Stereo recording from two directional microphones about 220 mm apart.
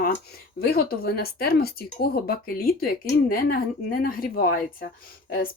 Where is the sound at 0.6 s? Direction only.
45° left (ahead or behind).